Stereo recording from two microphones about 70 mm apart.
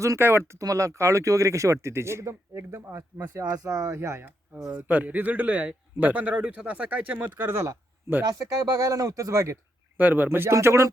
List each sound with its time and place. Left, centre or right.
0.2 s speech: right
0.6 s speech: right
3.5 s speech: right
4.9 s a man's voice: right
8.3 s speech: right
10.0 s speech: right